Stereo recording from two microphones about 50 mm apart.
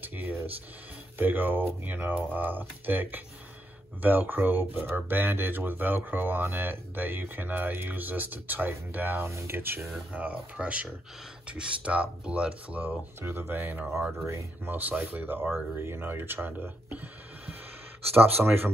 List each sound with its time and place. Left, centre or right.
0.0 s speech: right
10.1 s speech: right
13.2 s speech: right
15.8 s speech: right
18.1 s speech: right